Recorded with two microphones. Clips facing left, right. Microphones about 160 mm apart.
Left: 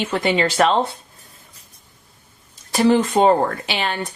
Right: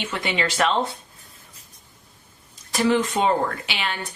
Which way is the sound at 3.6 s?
35° left (ahead or behind).